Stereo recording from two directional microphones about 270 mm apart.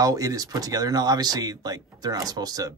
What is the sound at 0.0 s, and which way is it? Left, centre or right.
Speech, centre.